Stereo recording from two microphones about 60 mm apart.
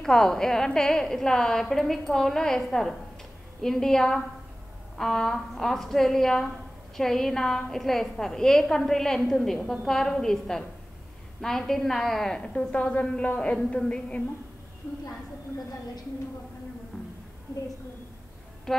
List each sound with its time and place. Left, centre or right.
0.0 s a woman's voice: centre
12.5 s a woman's voice: left
18.7 s music: centre